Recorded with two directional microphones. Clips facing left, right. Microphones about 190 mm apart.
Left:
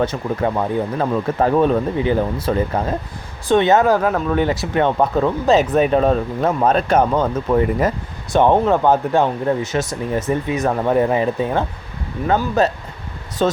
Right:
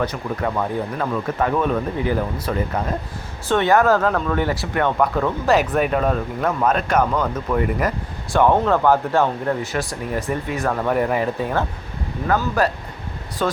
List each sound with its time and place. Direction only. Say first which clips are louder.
0.0 s speech: left 4 dB; 25° left (ahead or behind)